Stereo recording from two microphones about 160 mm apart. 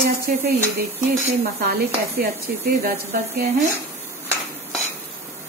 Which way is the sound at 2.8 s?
70° right (ahead or behind).